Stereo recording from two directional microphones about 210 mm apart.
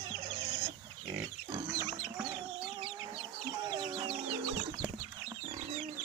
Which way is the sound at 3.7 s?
20° right (ahead or behind).